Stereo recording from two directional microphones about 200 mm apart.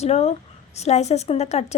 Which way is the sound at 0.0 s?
30° left (ahead or behind).